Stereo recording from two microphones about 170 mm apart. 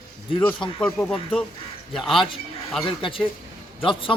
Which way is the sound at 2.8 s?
30° left (ahead or behind).